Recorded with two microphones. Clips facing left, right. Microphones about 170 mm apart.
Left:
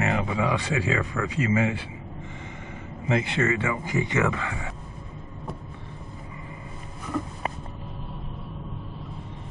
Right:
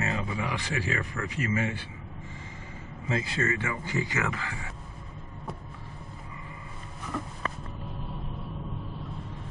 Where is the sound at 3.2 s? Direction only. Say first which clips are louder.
Left 5 dB; 25° left (ahead or behind).